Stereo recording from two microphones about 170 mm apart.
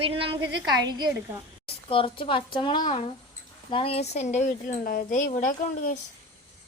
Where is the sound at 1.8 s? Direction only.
30° left (ahead or behind); by 5.9 s 50° left (ahead or behind).